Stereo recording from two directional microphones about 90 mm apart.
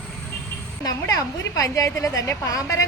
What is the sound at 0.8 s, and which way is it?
A woman's voice, 40° left (ahead or behind).